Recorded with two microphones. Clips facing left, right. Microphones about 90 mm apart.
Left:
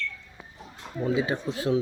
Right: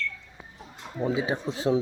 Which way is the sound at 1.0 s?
20° right (ahead or behind).